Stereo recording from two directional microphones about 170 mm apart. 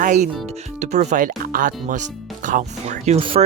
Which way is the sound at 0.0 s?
45° right (ahead or behind).